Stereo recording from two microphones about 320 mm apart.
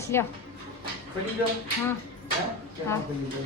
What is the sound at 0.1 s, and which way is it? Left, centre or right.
Speech, centre.